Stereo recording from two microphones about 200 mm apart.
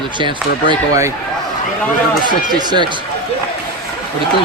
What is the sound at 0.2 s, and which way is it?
Speech, 25° right (ahead or behind).